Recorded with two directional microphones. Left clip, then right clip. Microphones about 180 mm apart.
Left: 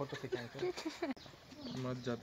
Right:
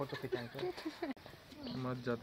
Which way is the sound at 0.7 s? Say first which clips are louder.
Left 2 dB; 40° left (ahead or behind).